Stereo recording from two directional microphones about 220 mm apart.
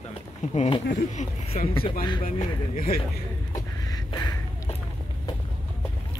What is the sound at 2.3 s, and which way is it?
Speech, 40° left (ahead or behind).